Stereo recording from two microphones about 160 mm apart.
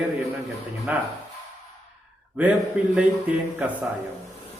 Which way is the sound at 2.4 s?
10° right (ahead or behind).